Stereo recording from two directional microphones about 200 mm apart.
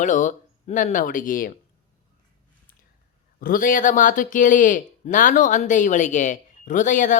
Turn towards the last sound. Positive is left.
turn(degrees=40)  # may be behind; listen again after turning